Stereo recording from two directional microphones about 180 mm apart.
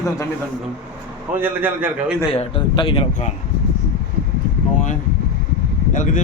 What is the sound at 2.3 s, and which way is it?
Speech, 30° left (ahead or behind).